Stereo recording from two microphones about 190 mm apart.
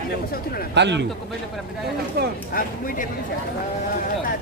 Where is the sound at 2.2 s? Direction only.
55° right (ahead or behind).